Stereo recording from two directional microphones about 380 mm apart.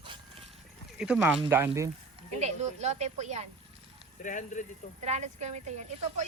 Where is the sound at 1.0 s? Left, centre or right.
Centre.